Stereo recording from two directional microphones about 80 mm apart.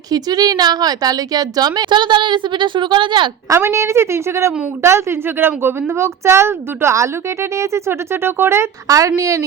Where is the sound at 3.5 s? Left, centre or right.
Right.